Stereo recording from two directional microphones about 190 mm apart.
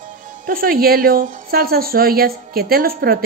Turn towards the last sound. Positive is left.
turn(degrees=-55)  # may be behind; listen again after turning